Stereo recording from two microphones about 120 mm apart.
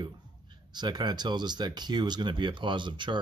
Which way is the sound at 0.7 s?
35° right (ahead or behind).